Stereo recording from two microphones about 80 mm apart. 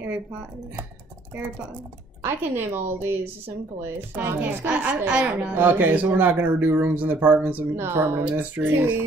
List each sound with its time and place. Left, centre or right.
2.2 s speech: right
4.4 s a woman's voice: centre
5.5 s speech: right